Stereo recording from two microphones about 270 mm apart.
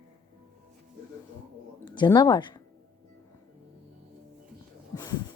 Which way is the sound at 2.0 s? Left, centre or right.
Centre.